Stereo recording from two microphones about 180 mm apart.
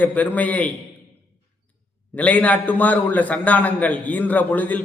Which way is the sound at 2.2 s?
10° left (ahead or behind).